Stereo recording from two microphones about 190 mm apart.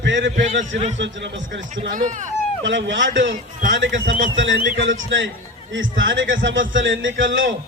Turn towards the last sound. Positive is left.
turn(degrees=-80)